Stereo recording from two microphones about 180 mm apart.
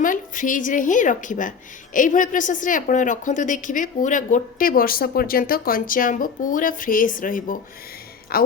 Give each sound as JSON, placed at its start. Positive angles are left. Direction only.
{"t": 0.0, "sound": "a woman's voice", "side_deg": 45}